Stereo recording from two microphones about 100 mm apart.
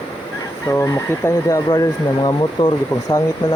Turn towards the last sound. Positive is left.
turn(degrees=45)  # may be behind; listen again after turning